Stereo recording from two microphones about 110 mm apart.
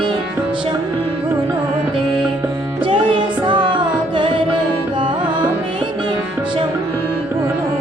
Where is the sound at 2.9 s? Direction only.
45° right (ahead or behind).